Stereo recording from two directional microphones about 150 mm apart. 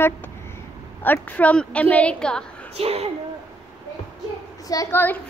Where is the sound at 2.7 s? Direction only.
40° right (ahead or behind).